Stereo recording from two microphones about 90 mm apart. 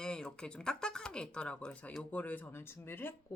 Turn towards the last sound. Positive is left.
turn(degrees=25)  # may be behind; listen again after turning